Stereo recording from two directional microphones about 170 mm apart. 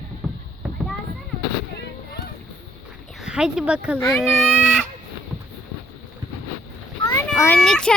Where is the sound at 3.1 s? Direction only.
Centre (ahead or behind).